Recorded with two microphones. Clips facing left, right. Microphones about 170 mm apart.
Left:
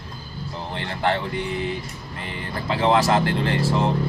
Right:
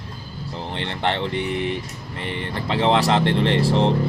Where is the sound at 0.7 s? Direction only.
25° right (ahead or behind).